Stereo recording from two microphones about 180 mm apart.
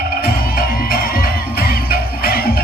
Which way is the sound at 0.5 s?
55° left (ahead or behind).